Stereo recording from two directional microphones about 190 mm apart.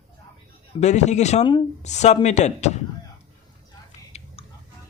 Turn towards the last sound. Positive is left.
turn(degrees=35)  # may be behind; listen again after turning